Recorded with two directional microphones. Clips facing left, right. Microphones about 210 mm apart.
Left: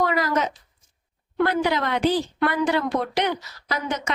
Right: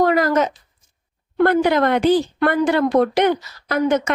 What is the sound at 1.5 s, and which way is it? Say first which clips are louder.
Speech: right 9 dB; 55° right (ahead or behind).